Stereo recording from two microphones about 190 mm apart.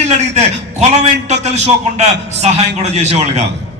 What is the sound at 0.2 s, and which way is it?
A man's voice, 35° right (ahead or behind).